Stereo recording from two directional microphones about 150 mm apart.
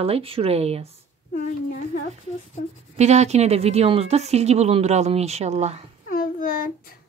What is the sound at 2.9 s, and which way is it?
A woman's voice, 50° right (ahead or behind).